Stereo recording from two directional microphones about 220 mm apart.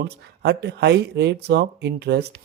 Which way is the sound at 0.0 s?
50° right (ahead or behind).